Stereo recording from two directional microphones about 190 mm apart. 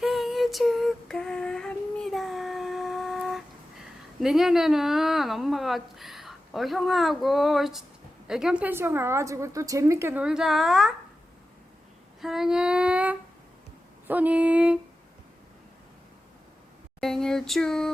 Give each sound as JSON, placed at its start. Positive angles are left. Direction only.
{"t": 0.0, "sound": "female singing", "side_deg": 0}
{"t": 8.3, "sound": "a woman's voice", "side_deg": -5}
{"t": 12.2, "sound": "female singing", "side_deg": 0}
{"t": 14.1, "sound": "a woman's voice", "side_deg": -10}
{"t": 17.0, "sound": "female singing", "side_deg": 0}